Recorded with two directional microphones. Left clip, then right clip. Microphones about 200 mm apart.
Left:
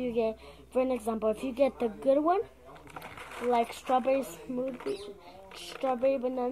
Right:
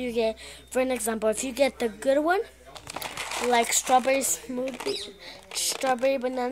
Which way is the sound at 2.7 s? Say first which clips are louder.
Right 10 dB; 55° right (ahead or behind).